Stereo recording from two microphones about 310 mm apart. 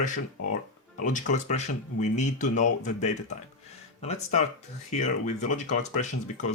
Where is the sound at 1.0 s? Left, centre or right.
Left.